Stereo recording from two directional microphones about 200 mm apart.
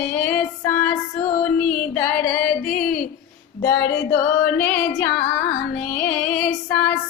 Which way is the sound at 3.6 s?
55° left (ahead or behind).